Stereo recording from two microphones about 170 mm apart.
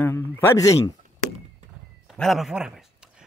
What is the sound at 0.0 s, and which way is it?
Speech, 15° left (ahead or behind).